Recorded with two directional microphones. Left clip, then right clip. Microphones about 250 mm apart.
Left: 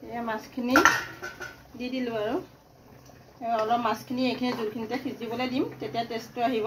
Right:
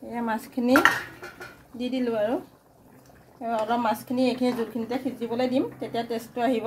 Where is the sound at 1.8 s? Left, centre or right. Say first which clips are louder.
Right 4 dB; right.